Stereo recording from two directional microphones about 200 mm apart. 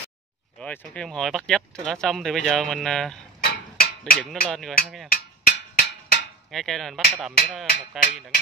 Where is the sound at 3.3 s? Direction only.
45° left (ahead or behind).